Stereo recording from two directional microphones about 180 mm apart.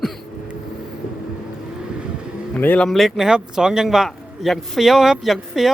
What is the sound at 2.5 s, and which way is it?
Speech, 10° left (ahead or behind).